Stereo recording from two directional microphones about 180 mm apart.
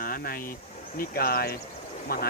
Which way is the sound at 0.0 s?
55° left (ahead or behind).